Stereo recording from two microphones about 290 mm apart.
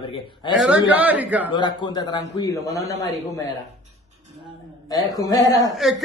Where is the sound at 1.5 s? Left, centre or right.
Centre.